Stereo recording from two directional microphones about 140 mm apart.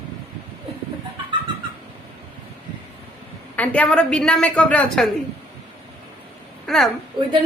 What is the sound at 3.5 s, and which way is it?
A woman's voice, 10° left (ahead or behind).